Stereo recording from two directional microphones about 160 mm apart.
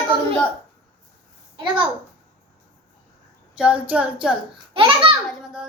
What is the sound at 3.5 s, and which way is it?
Speech, 5° right (ahead or behind).